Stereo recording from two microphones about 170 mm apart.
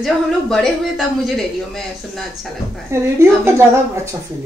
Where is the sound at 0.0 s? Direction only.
Centre (ahead or behind).